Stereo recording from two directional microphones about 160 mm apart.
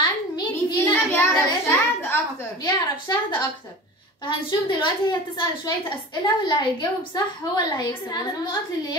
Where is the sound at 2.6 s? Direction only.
25° left (ahead or behind).